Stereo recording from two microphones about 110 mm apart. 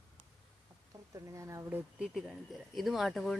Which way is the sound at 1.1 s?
30° right (ahead or behind).